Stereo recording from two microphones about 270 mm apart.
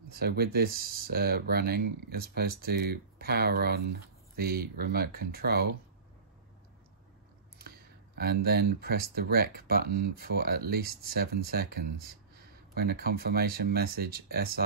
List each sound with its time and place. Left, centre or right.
0.1 s speech: right
8.2 s speech: right